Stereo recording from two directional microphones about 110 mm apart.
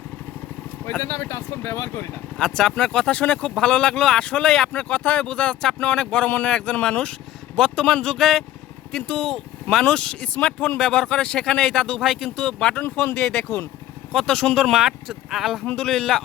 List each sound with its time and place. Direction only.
0.9 s speech: 25° left (ahead or behind)
2.4 s speech: 5° left (ahead or behind)
12.8 s speech: 20° left (ahead or behind)
13.1 s speech: 5° left (ahead or behind)